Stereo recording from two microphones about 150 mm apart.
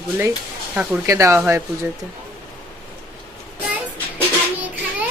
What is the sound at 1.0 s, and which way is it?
Speech, 20° right (ahead or behind).